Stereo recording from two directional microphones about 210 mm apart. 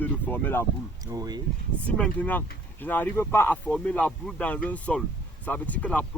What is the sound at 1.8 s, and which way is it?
Speech, 5° left (ahead or behind).